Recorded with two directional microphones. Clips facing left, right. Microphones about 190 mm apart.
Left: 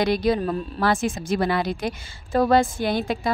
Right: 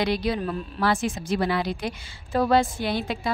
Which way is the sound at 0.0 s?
45° left (ahead or behind).